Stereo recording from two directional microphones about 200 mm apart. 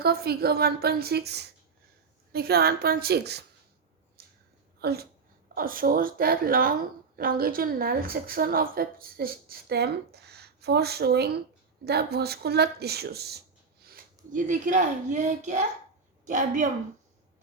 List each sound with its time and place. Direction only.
0.0 s a woman's voice: 50° right (ahead or behind)
4.2 s clicking: 50° right (ahead or behind)
4.8 s a woman's voice: 50° right (ahead or behind)